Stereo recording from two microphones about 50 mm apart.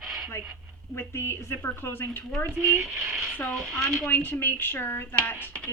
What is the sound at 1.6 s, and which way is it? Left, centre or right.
Speech, left.